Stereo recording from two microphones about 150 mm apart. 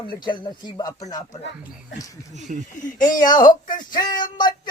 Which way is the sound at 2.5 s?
60° right (ahead or behind).